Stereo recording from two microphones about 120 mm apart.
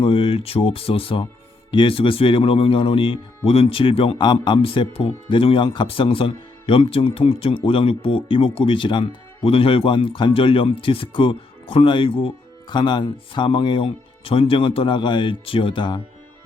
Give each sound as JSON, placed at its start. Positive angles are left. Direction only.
{"t": 0.0, "sound": "speech", "side_deg": 45}